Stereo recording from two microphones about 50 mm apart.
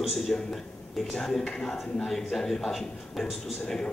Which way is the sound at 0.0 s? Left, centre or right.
Centre.